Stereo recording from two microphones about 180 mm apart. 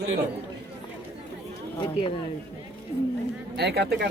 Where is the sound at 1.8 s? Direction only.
30° left (ahead or behind).